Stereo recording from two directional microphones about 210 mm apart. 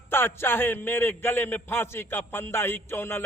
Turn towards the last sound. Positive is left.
turn(degrees=10)  # may be behind; listen again after turning